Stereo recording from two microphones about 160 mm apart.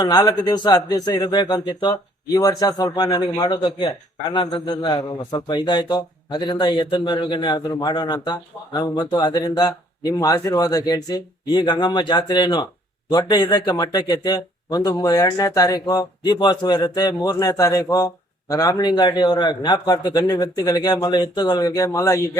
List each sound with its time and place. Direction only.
0.0 s a man's voice: 25° left (ahead or behind)